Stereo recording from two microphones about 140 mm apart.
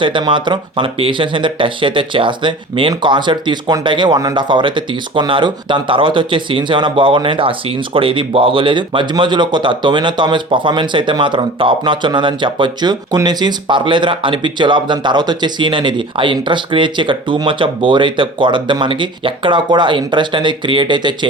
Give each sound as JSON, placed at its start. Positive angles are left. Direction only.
{"t": 0.0, "sound": "speech", "side_deg": -35}